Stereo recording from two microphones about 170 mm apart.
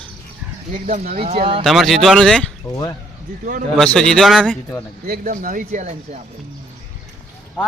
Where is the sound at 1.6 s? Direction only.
Centre (ahead or behind).